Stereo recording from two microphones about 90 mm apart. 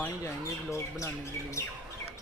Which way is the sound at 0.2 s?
35° left (ahead or behind).